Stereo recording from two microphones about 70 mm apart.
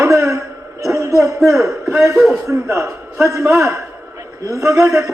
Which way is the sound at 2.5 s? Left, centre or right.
Right.